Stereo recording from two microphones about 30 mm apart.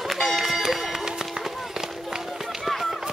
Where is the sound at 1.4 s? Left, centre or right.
Centre.